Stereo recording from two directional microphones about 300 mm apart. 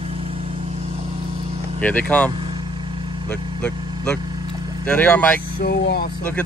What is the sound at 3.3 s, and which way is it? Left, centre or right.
Vehicle, centre.